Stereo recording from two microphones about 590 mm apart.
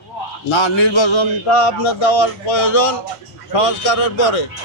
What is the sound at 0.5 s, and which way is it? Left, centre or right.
A man's voice, left.